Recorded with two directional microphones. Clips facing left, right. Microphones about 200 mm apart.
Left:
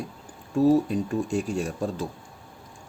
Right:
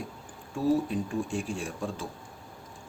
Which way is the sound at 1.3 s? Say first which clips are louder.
Left 6 dB; 40° left (ahead or behind).